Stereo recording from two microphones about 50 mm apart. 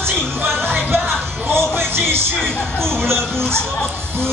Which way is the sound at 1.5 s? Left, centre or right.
Right.